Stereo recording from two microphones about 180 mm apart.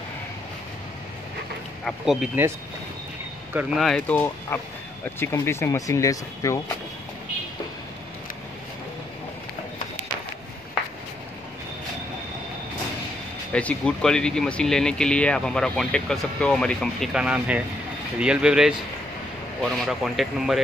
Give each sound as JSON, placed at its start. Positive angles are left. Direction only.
{"t": 1.9, "sound": "speech", "side_deg": -5}
{"t": 3.5, "sound": "speech", "side_deg": 0}
{"t": 13.5, "sound": "speech", "side_deg": 5}